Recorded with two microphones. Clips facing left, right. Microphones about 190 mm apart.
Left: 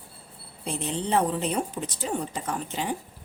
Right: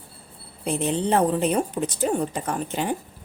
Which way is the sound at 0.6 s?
55° right (ahead or behind).